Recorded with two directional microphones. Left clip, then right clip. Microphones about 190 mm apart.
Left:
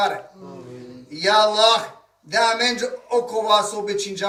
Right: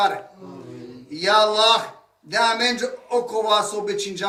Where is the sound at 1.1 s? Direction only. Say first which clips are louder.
Left 1 dB; 5° left (ahead or behind).